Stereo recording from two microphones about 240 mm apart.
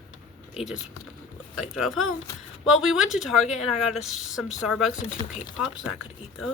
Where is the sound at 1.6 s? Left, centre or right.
Centre.